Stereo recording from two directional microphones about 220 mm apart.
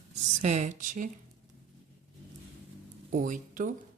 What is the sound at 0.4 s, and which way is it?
Speech, 35° right (ahead or behind).